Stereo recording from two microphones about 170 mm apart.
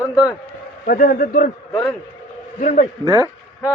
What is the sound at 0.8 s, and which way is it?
Speech, 55° left (ahead or behind).